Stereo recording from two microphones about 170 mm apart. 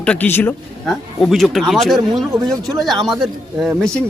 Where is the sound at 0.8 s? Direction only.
Centre (ahead or behind).